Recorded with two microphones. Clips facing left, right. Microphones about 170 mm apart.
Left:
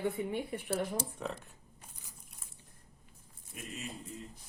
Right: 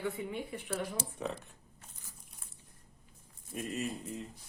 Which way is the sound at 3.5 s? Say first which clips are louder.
Right 8 dB; 45° right (ahead or behind).